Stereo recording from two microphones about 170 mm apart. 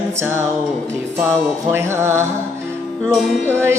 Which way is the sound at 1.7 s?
15° right (ahead or behind).